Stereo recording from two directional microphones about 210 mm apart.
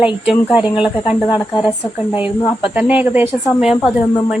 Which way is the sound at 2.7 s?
10° right (ahead or behind).